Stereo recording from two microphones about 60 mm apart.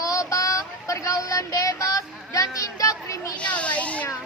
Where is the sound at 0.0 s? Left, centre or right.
Left.